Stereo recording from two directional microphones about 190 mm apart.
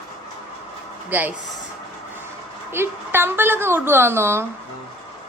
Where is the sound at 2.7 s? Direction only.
10° right (ahead or behind).